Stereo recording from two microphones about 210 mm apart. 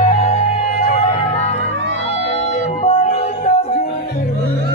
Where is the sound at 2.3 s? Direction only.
30° left (ahead or behind).